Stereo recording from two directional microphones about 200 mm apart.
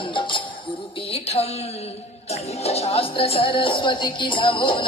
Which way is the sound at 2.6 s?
30° left (ahead or behind).